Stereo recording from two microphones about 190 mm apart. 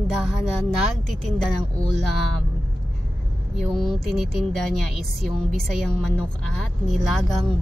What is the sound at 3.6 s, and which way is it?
A woman's voice, centre (ahead or behind).